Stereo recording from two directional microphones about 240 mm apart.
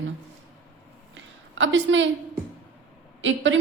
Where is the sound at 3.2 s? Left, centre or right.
Right.